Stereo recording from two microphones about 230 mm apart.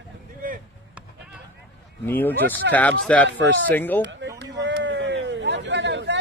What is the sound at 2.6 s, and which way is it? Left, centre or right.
Speech, right.